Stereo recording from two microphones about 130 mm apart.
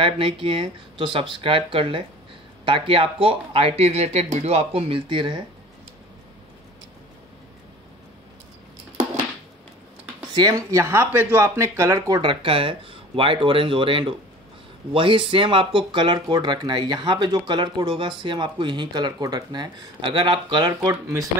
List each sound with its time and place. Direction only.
0.0 s speech: 45° right (ahead or behind)
10.3 s speech: 30° right (ahead or behind)
12.2 s speech: 40° right (ahead or behind); by 21.3 s 25° right (ahead or behind)